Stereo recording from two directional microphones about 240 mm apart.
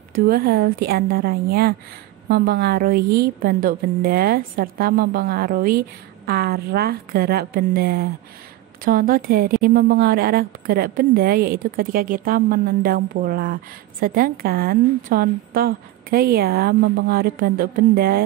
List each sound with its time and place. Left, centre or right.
0.1 s a woman's voice: right